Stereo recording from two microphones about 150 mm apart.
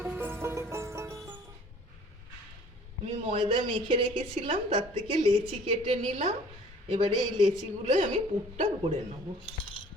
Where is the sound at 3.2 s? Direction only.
40° right (ahead or behind).